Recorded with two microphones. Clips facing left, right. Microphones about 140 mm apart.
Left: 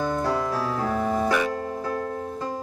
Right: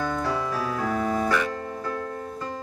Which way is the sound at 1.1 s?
15° left (ahead or behind).